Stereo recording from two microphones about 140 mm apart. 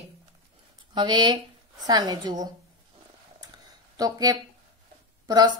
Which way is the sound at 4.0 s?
25° right (ahead or behind).